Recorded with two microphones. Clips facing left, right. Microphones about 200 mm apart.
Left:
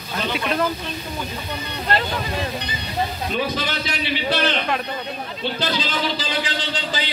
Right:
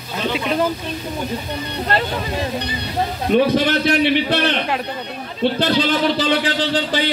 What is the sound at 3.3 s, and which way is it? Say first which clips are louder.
A man's voice: right 12 dB; 65° right (ahead or behind).